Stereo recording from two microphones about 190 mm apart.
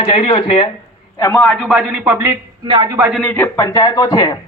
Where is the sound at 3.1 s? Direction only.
5° left (ahead or behind).